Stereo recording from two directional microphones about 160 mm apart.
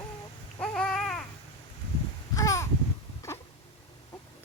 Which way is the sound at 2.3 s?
20° left (ahead or behind).